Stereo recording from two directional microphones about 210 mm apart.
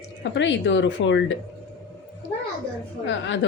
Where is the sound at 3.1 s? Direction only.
60° left (ahead or behind).